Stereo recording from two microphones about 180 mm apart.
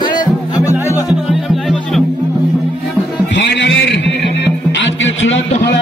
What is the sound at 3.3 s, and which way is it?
Music, 75° left (ahead or behind).